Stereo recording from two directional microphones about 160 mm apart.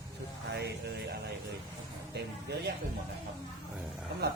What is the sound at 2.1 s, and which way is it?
Speech, 90° right.